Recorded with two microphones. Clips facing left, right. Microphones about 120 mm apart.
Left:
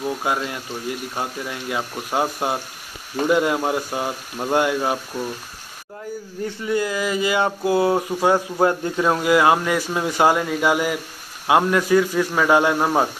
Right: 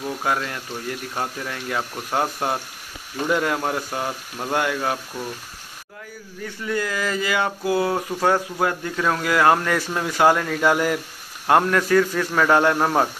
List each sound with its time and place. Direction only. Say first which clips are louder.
0.0 s speech: left 1 dB; 15° left (ahead or behind)
6.4 s a sound: left 3 dB; 20° left (ahead or behind)
8.5 s speech: left 4 dB; 25° left (ahead or behind); by 13.1 s 10° left (ahead or behind)